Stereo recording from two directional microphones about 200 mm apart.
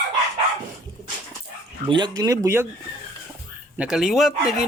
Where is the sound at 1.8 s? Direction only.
25° right (ahead or behind).